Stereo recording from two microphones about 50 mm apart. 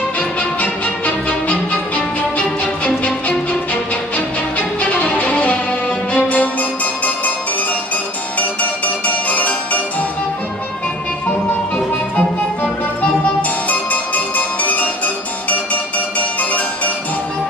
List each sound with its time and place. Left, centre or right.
0.4 s music: left
4.6 s music: left
8.4 s music: left
11.2 s music: left